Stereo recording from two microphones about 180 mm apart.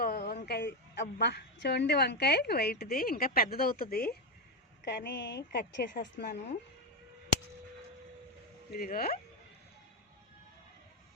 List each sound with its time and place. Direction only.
0.0 s a woman's voice: 60° left (ahead or behind)
8.7 s speech: 55° left (ahead or behind)